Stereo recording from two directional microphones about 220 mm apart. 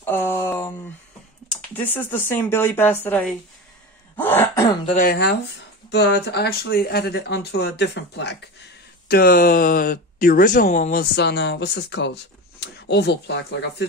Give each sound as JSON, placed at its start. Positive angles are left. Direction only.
{"t": 0.0, "sound": "a sound", "side_deg": 10}
{"t": 1.9, "sound": "speech", "side_deg": 10}
{"t": 4.2, "sound": "throat clearing", "side_deg": 10}
{"t": 4.8, "sound": "speech", "side_deg": 40}
{"t": 9.1, "sound": "speech", "side_deg": 40}